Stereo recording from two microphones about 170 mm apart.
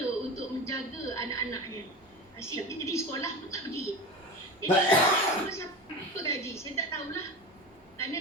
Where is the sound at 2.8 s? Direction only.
15° left (ahead or behind).